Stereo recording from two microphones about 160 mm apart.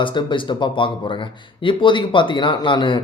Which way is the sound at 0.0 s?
30° left (ahead or behind).